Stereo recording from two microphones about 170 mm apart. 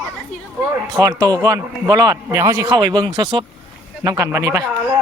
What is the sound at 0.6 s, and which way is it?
Speech, 20° right (ahead or behind).